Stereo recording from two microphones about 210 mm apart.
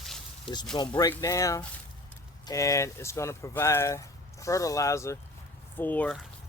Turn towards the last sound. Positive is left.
turn(degrees=10)  # may be behind; listen again after turning